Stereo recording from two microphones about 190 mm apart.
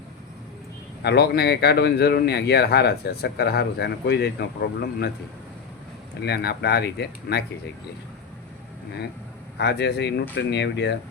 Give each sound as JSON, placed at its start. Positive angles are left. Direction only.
{"t": 1.0, "sound": "speech", "side_deg": 60}
{"t": 6.2, "sound": "speech", "side_deg": 60}
{"t": 9.6, "sound": "speech", "side_deg": 60}